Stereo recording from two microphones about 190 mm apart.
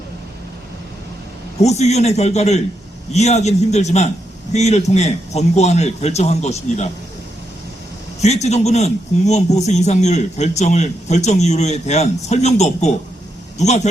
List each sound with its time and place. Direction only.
1.6 s a man's voice: 35° left (ahead or behind)
8.2 s a man's voice: 35° left (ahead or behind)